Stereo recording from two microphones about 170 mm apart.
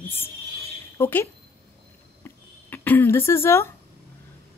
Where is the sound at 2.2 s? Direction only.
10° left (ahead or behind).